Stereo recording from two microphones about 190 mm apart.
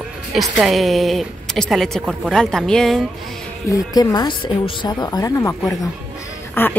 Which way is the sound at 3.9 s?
25° left (ahead or behind).